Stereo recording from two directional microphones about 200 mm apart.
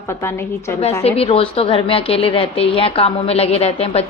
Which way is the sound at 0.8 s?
30° left (ahead or behind).